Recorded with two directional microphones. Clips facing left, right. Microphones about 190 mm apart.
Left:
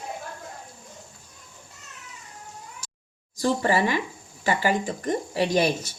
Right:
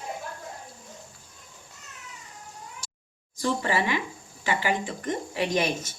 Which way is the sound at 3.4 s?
40° left (ahead or behind).